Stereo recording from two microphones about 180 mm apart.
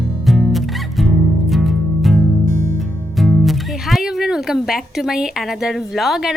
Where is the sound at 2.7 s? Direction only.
Centre (ahead or behind).